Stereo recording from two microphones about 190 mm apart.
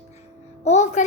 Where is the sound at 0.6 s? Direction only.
40° left (ahead or behind).